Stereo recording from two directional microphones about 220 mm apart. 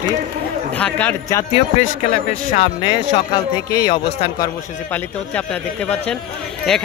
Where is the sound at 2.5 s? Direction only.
30° left (ahead or behind).